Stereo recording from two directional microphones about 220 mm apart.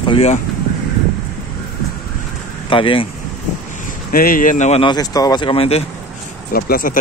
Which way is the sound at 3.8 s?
40° left (ahead or behind).